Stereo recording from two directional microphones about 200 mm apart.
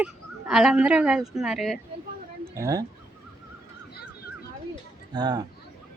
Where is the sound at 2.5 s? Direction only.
15° right (ahead or behind).